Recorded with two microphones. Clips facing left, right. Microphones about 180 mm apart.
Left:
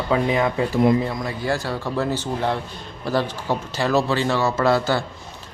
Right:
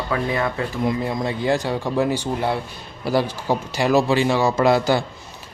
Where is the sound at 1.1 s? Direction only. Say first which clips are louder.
Right 3 dB; 20° right (ahead or behind).